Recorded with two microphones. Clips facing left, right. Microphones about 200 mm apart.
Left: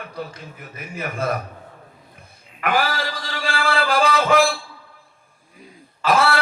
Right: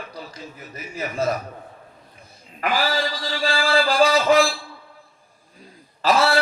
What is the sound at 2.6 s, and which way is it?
A man's voice, 55° left (ahead or behind).